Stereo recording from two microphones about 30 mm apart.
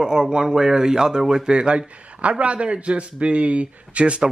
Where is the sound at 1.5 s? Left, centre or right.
Right.